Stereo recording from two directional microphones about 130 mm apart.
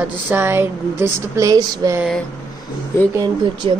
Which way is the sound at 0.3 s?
15° right (ahead or behind).